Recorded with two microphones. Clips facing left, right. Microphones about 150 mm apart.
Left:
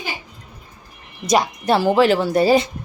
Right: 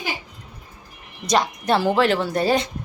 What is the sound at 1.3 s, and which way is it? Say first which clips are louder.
Speech: left 3 dB; 5° left (ahead or behind).